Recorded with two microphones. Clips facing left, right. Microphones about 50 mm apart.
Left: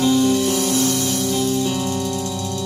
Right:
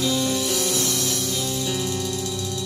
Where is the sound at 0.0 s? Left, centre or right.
Left.